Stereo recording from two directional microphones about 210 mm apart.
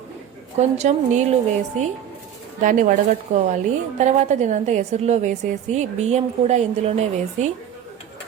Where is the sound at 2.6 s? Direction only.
35° right (ahead or behind).